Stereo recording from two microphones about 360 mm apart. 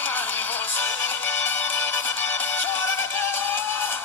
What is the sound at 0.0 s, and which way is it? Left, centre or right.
Music, centre.